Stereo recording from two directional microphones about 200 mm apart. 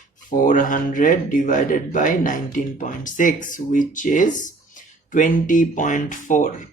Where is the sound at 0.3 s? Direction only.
40° left (ahead or behind).